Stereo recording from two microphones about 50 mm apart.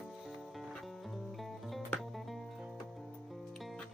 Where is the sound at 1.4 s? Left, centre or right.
Centre.